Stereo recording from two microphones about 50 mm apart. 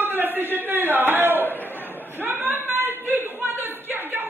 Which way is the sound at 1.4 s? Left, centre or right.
Left.